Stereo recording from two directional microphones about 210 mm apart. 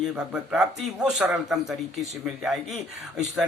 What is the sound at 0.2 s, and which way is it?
Speech, 5° right (ahead or behind).